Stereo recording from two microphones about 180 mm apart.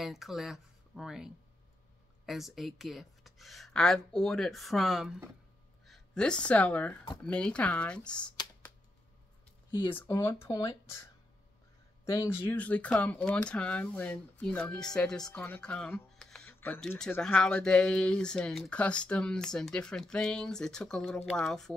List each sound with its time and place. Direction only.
0.0 s speech: centre (ahead or behind)
9.7 s speech: 25° left (ahead or behind)
9.9 s speech: 15° left (ahead or behind)